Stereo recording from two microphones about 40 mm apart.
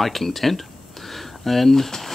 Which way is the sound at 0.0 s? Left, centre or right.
Centre.